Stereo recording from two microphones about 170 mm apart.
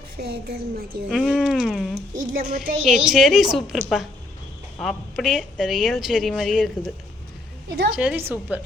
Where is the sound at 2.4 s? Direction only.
50° right (ahead or behind).